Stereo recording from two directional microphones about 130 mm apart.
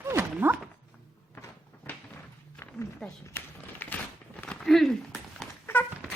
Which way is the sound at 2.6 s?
10° left (ahead or behind).